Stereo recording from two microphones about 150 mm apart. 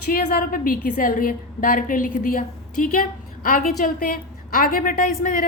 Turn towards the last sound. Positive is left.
turn(degrees=65)  # may be behind; listen again after turning